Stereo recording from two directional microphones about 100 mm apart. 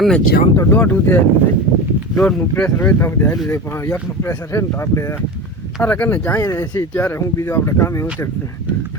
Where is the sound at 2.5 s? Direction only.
15° left (ahead or behind).